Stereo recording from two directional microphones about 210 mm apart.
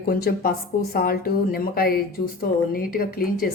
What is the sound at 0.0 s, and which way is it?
A woman's voice, 45° left (ahead or behind).